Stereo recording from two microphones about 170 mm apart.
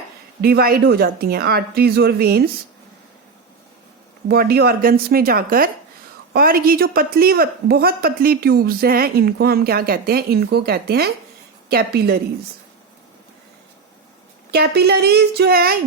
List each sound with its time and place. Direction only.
0.4 s a woman's voice: 65° right (ahead or behind)
4.3 s a woman's voice: 65° right (ahead or behind)
14.5 s speech: 70° right (ahead or behind)